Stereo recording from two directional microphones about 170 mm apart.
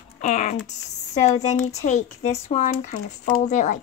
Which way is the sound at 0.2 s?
45° left (ahead or behind).